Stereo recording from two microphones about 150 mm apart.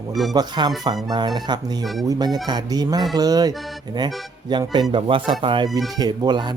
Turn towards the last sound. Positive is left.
turn(degrees=-30)  # may be behind; listen again after turning